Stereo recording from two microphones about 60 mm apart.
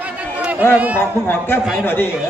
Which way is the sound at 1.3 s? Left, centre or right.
Left.